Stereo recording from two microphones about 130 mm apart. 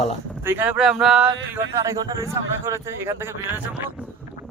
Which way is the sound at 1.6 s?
25° right (ahead or behind).